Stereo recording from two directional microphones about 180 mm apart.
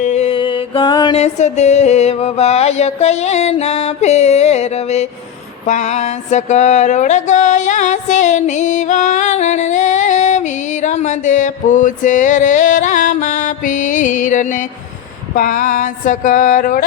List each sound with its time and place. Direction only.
0.0 s music: 40° left (ahead or behind)
1.2 s music: 40° left (ahead or behind)
5.6 s mantra: 40° left (ahead or behind)
15.4 s speech: 45° left (ahead or behind)